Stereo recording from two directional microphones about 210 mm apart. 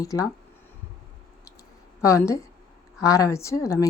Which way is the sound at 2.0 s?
15° left (ahead or behind).